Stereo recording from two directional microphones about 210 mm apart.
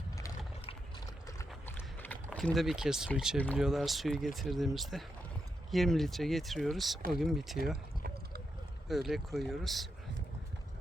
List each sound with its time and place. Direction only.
0.6 s a sound: 25° left (ahead or behind)
1.6 s clip-clop: 10° left (ahead or behind)
2.3 s speech: centre (ahead or behind)
8.9 s speech: centre (ahead or behind)